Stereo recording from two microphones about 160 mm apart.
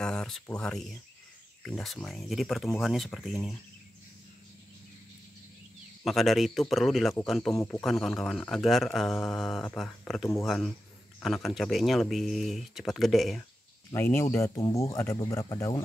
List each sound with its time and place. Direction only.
0.0 s speech: 5° left (ahead or behind)
6.0 s speech: centre (ahead or behind)
13.9 s speech: 15° left (ahead or behind)